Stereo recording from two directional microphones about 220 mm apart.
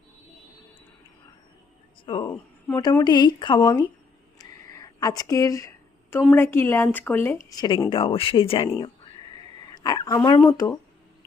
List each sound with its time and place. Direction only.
2.0 s speech: 20° left (ahead or behind)
4.4 s a sound: 15° left (ahead or behind)
6.3 s speech: 10° left (ahead or behind)